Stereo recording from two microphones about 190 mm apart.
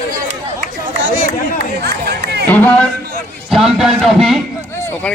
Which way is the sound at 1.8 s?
60° right (ahead or behind).